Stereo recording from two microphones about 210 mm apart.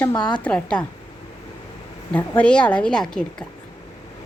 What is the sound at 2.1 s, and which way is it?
A woman's voice, 5° left (ahead or behind).